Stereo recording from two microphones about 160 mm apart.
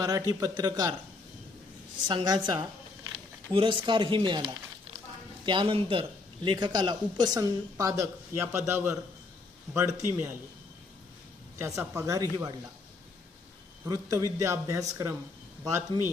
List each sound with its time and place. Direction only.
0.0 s a man's voice: 20° right (ahead or behind)
2.0 s a man's voice: 25° right (ahead or behind)
5.5 s a man's voice: 30° right (ahead or behind); by 10.3 s 15° right (ahead or behind)
11.5 s a man's voice: 15° right (ahead or behind)
13.8 s a man's voice: 25° right (ahead or behind)